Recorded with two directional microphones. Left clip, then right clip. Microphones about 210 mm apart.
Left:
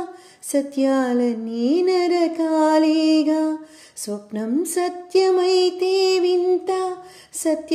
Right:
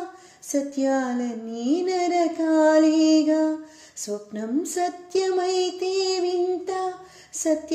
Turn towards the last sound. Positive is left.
turn(degrees=35)  # may be behind; listen again after turning